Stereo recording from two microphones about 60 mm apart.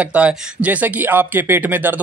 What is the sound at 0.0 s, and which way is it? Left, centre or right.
Speech, right.